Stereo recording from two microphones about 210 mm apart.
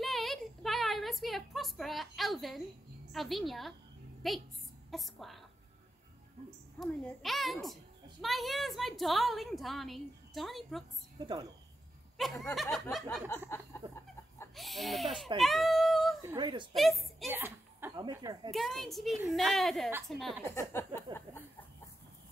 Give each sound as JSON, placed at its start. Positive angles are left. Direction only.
{"t": 0.0, "sound": "a sound", "side_deg": 0}
{"t": 3.1, "sound": "a child's voice", "side_deg": 0}
{"t": 6.8, "sound": "a child's voice", "side_deg": 0}
{"t": 11.1, "sound": "speech", "side_deg": -20}
{"t": 12.2, "sound": "a child's voice", "side_deg": 0}
{"t": 13.7, "sound": "chicken", "side_deg": 10}
{"t": 14.5, "sound": "a child's voice", "side_deg": 0}
{"t": 16.3, "sound": "speech", "side_deg": -20}
{"t": 16.7, "sound": "a woman's voice", "side_deg": 0}
{"t": 17.3, "sound": "a woman's voice", "side_deg": -10}
{"t": 18.5, "sound": "a child's voice", "side_deg": 0}
{"t": 21.1, "sound": "speech", "side_deg": -20}